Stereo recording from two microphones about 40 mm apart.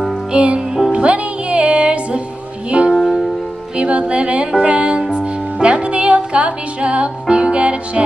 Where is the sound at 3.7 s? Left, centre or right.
Right.